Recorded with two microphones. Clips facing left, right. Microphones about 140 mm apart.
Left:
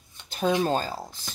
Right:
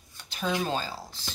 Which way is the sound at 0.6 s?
45° left (ahead or behind).